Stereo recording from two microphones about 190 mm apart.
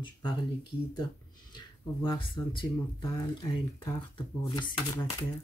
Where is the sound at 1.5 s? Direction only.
25° left (ahead or behind).